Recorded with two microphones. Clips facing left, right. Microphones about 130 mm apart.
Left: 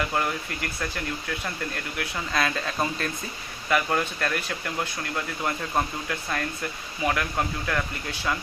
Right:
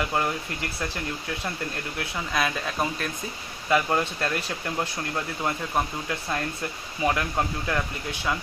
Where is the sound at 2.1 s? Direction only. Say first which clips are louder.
Even; 10° right (ahead or behind).